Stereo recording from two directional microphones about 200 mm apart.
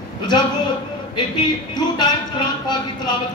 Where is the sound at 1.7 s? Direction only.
20° left (ahead or behind).